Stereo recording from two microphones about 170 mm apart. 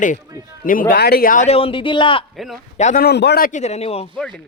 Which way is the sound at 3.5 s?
40° left (ahead or behind).